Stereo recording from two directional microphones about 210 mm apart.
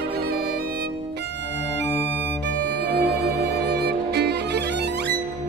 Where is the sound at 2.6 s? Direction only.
55° right (ahead or behind).